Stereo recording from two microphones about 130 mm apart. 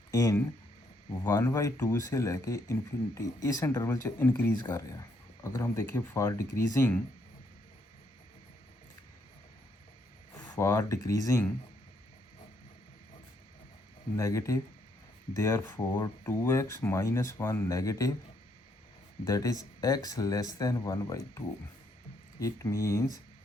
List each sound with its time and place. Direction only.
0.1 s speech: 25° left (ahead or behind)
4.5 s speech: 25° left (ahead or behind)
10.4 s speech: 25° left (ahead or behind)
14.2 s speech: 25° left (ahead or behind)
19.2 s speech: 25° left (ahead or behind)